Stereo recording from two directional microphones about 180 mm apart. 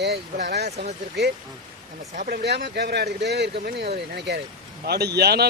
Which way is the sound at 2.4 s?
70° right (ahead or behind).